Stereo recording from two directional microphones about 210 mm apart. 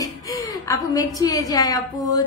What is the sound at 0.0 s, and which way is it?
A woman's voice, 15° left (ahead or behind).